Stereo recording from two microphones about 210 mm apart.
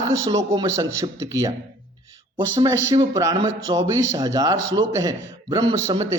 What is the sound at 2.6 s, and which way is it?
Speech, 15° right (ahead or behind).